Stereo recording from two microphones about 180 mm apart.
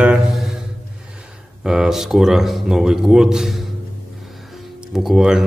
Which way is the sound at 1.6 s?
5° right (ahead or behind).